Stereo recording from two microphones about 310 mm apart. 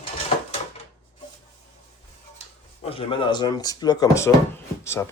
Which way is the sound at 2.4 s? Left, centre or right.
Left.